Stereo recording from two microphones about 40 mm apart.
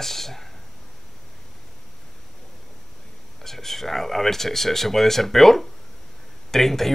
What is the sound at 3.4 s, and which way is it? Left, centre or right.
Speech, centre.